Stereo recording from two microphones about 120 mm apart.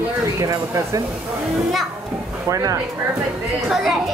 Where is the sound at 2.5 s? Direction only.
30° right (ahead or behind).